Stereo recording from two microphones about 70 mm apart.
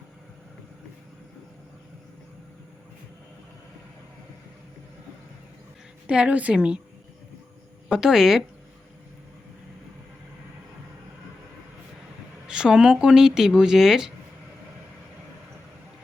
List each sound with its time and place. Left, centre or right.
6.1 s speech: centre
7.9 s speech: centre
12.5 s speech: centre